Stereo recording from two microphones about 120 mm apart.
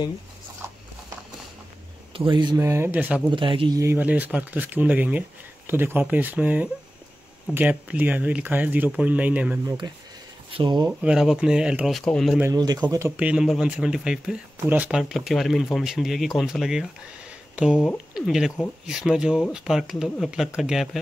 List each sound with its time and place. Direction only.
2.1 s speech: 40° right (ahead or behind)
2.5 s speech: 20° right (ahead or behind)
3.3 s speech: 45° right (ahead or behind)
3.7 s speech: 20° right (ahead or behind)
9.7 s speech: 35° right (ahead or behind)
10.9 s speech: 10° right (ahead or behind)
12.5 s speech: 35° right (ahead or behind)
13.1 s speech: 10° right (ahead or behind)
18.1 s speech: 5° right (ahead or behind)